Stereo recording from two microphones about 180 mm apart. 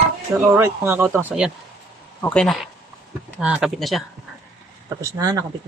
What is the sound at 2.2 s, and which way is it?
Speech, 5° left (ahead or behind).